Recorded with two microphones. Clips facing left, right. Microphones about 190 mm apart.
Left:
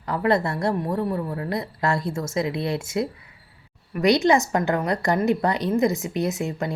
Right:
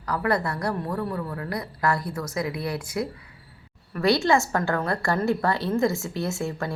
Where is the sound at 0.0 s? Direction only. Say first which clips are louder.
Left 3 dB; 25° left (ahead or behind).